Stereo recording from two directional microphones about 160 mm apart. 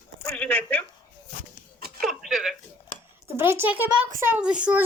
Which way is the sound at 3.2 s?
15° right (ahead or behind).